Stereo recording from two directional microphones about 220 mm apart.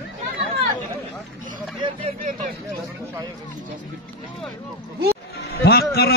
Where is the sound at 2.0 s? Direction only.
35° right (ahead or behind).